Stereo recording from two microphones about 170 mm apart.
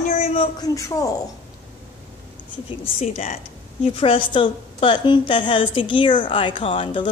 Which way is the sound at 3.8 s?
35° left (ahead or behind).